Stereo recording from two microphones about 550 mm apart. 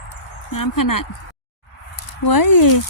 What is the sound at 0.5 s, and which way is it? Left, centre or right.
Speech, left.